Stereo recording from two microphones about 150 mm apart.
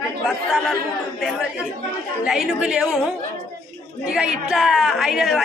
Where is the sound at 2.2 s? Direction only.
5° right (ahead or behind).